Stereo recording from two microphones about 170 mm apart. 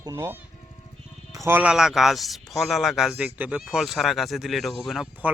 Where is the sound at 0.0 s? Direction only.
15° right (ahead or behind).